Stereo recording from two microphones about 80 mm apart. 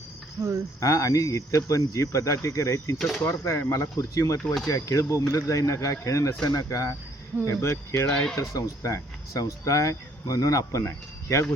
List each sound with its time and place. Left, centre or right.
0.4 s speech: right
0.8 s speech: left
8.1 s speech: centre
8.4 s speech: left